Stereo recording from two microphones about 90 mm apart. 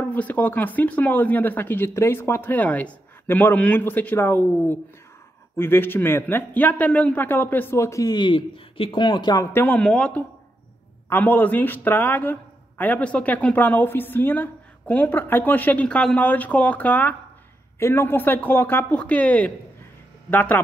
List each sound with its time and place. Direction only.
0.0 s speech: 20° left (ahead or behind)
8.1 s speech: 60° left (ahead or behind); by 9.0 s 85° left
9.0 s speech: 55° left (ahead or behind)
9.4 s speech: 25° left (ahead or behind)
9.8 s speech: 15° left (ahead or behind)